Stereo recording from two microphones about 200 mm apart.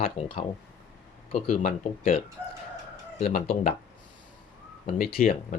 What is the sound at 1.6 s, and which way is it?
Speech, 45° left (ahead or behind).